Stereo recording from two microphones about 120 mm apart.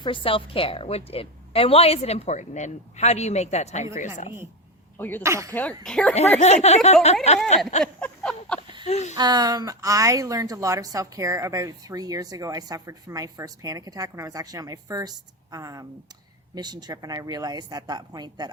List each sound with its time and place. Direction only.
0.0 s a woman's voice: 45° left (ahead or behind); by 3.8 s 65° left (ahead or behind)
3.9 s a woman's voice: 90° left
4.9 s speech: 15° left (ahead or behind)
5.2 s speech: 25° right (ahead or behind)
5.5 s speech: 10° left (ahead or behind)
6.4 s speech: 70° left (ahead or behind)
8.0 s a sound: 10° left (ahead or behind)
8.8 s speech: 70° left (ahead or behind)
9.1 s speech: 35° right (ahead or behind)